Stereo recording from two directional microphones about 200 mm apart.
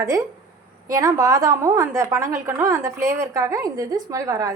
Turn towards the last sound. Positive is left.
turn(degrees=-15)  # may be behind; listen again after turning